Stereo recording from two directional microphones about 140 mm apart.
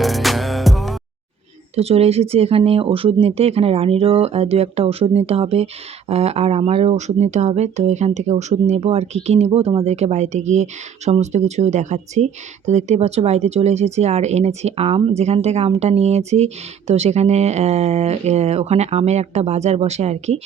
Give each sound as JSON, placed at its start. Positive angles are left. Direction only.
{"t": 0.0, "sound": "music", "side_deg": 0}
{"t": 1.7, "sound": "speech", "side_deg": -45}